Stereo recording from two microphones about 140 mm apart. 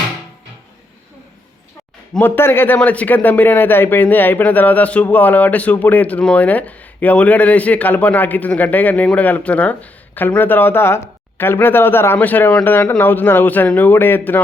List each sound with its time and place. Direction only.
2.1 s speech: 15° left (ahead or behind)